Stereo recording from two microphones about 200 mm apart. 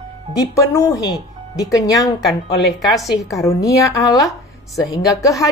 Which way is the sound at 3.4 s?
15° left (ahead or behind).